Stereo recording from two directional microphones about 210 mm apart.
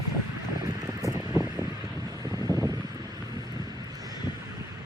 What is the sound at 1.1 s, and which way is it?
Vehicle, 15° right (ahead or behind).